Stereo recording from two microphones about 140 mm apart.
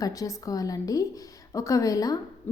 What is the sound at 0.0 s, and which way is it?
A woman's voice, 25° left (ahead or behind).